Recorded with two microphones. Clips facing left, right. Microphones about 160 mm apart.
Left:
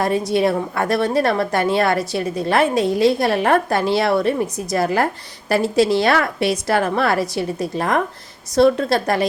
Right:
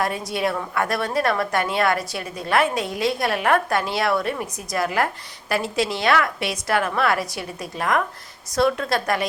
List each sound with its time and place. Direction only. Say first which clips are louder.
0.0 s a woman's voice: left 6 dB; 30° left (ahead or behind)